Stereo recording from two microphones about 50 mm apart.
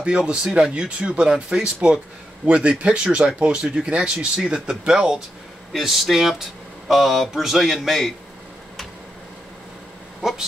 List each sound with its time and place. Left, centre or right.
0.0 s speech: centre